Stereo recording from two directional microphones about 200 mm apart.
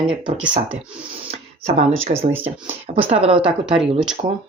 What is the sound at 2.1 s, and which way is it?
Speech, 45° right (ahead or behind).